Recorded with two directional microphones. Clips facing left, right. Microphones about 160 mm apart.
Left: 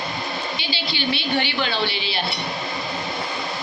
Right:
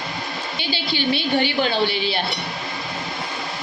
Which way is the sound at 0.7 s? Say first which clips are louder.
Right 5 dB; 50° right (ahead or behind).